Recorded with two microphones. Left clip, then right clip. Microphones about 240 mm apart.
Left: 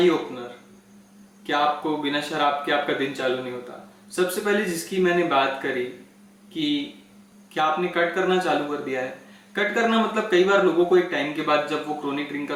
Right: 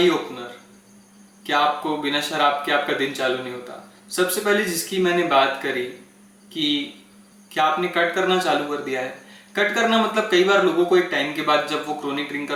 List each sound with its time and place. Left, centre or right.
0.0 s speech: centre
7.5 s speech: centre